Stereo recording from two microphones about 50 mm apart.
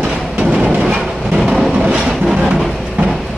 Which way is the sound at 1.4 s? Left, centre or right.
Centre.